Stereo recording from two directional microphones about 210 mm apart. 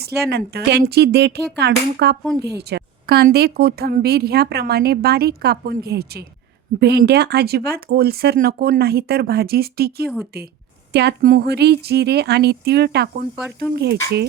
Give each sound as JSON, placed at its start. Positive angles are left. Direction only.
{"t": 0.0, "sound": "a woman's voice", "side_deg": -50}